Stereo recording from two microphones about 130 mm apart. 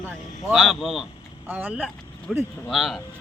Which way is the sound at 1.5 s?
15° right (ahead or behind).